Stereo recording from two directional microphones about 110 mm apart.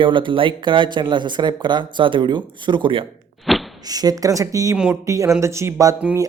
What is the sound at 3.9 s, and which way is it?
Speech, 35° right (ahead or behind).